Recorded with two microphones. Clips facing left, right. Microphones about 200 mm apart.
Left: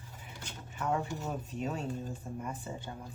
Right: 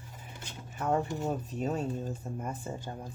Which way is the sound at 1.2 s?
40° right (ahead or behind).